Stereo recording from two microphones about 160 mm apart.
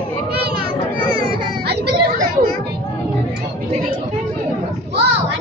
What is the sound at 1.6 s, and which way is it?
Chatter, 85° right.